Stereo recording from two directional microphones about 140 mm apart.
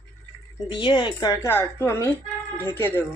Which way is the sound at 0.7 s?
35° left (ahead or behind).